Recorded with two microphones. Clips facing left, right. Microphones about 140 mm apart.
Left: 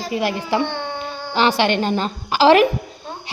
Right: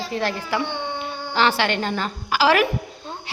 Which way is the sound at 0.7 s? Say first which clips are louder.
Left 1 dB; 15° right (ahead or behind).